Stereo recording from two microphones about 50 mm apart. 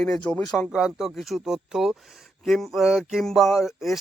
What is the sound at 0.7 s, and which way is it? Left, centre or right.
Speech, centre.